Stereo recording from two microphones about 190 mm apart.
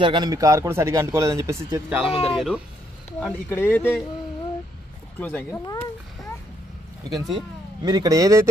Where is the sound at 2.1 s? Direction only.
30° left (ahead or behind).